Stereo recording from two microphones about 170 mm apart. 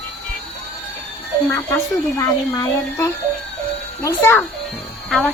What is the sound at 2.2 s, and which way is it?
Speech, 15° left (ahead or behind).